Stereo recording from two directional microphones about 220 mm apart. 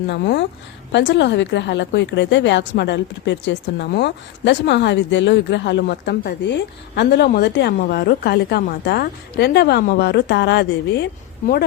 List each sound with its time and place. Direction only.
0.1 s a woman's voice: 50° left (ahead or behind)